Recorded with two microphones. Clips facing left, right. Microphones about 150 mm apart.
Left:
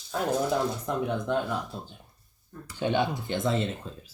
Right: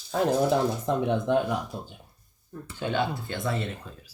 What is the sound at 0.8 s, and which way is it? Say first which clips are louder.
Speech: right 4 dB; 20° right (ahead or behind).